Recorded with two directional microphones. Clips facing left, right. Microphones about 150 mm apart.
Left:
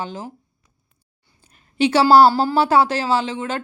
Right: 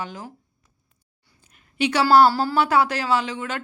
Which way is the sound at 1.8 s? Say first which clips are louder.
Left 4 dB; 30° left (ahead or behind).